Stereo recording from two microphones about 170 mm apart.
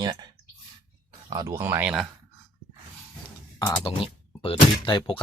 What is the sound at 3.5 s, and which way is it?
Speech, 25° left (ahead or behind).